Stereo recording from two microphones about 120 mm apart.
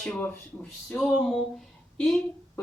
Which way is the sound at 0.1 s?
15° left (ahead or behind).